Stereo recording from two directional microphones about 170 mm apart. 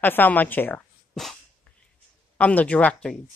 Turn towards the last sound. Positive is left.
turn(degrees=5)  # may be behind; listen again after turning